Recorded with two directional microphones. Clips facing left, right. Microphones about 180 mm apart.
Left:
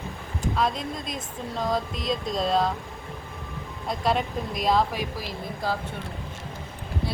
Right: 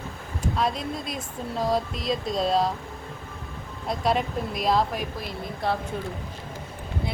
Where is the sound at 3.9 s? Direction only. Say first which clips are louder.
Right 1 dB; centre (ahead or behind).